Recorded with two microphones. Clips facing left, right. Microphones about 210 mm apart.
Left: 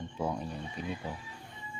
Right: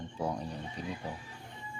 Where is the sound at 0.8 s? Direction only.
35° right (ahead or behind).